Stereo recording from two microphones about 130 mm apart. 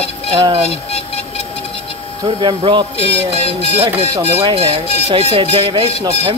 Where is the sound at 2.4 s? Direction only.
40° right (ahead or behind).